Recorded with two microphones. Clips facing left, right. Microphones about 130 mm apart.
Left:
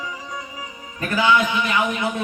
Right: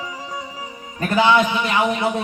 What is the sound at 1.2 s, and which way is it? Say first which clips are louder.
Music: right 3 dB; 30° right (ahead or behind).